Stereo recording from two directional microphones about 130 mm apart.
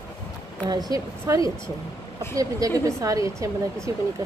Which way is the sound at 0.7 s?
30° right (ahead or behind).